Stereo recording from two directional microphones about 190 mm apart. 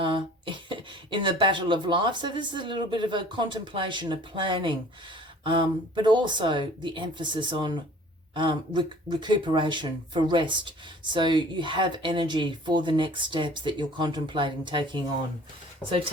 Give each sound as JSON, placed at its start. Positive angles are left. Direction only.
{"t": 0.0, "sound": "speech", "side_deg": -25}